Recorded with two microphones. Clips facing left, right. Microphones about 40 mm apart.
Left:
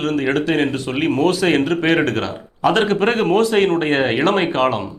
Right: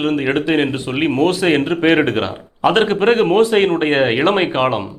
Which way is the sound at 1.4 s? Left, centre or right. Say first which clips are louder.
Right 2 dB; centre.